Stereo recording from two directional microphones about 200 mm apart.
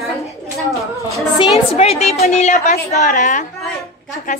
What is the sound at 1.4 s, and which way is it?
A woman's voice, 30° left (ahead or behind).